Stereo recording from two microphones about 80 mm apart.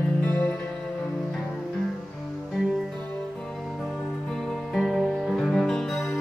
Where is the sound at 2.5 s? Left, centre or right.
Centre.